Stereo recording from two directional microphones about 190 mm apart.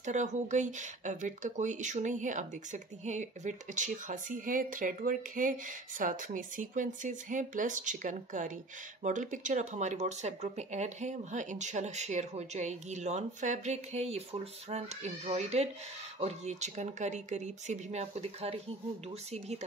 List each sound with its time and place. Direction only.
0.0 s speech: 40° right (ahead or behind)